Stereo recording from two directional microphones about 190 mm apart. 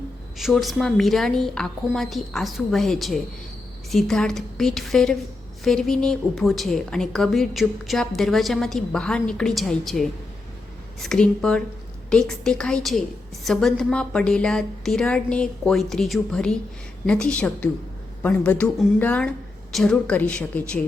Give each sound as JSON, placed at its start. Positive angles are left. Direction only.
{"t": 0.3, "sound": "a woman's voice", "side_deg": 0}